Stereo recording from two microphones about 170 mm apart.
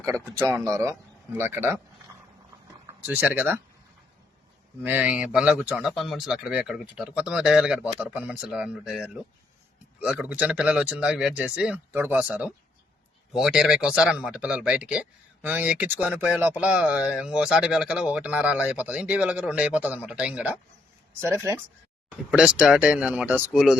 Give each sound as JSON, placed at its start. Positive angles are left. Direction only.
{"t": 0.0, "sound": "speech", "side_deg": -15}
{"t": 4.8, "sound": "speech", "side_deg": -10}
{"t": 22.3, "sound": "speech", "side_deg": -5}